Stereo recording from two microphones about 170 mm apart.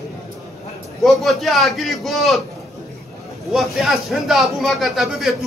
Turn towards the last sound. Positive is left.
turn(degrees=0)  # may be behind; listen again after turning